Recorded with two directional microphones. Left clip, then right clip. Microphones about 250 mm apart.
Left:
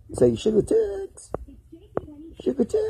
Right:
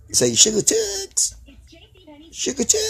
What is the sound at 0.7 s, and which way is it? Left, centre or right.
Speech, right.